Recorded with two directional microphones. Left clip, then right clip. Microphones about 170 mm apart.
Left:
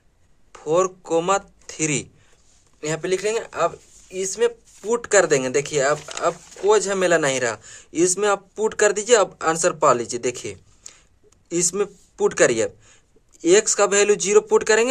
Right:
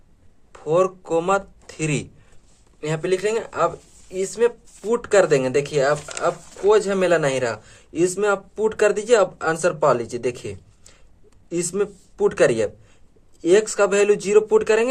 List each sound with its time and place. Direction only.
0.5 s speech: 35° left (ahead or behind)